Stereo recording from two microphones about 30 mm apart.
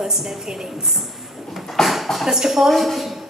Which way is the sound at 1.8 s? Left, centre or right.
Centre.